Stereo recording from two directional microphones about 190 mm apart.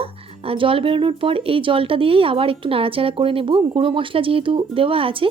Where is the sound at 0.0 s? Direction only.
30° right (ahead or behind).